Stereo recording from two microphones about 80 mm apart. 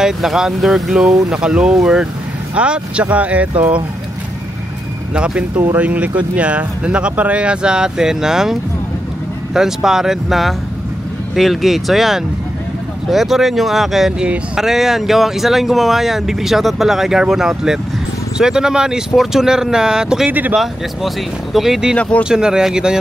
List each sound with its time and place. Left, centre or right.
0.0 s speech: centre
5.1 s speech: centre
20.2 s speech: right
20.5 s speech: centre